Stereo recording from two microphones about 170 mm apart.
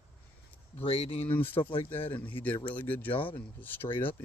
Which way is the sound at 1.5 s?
30° left (ahead or behind).